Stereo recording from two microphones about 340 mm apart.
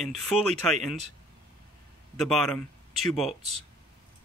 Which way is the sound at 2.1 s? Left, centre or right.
Centre.